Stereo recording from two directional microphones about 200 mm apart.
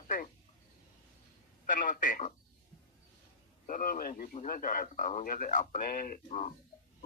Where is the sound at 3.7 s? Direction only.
45° left (ahead or behind).